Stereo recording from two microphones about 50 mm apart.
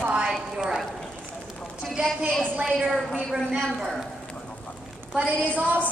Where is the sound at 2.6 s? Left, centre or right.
Centre.